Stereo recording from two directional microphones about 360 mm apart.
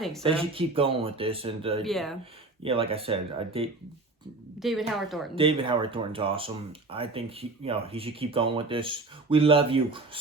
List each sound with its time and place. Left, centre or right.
0.2 s speech: centre
1.8 s a woman's voice: centre
2.6 s speech: centre
4.6 s a woman's voice: centre
5.3 s speech: centre